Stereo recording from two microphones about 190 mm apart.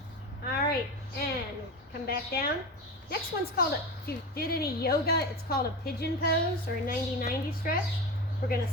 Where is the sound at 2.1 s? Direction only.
55° left (ahead or behind).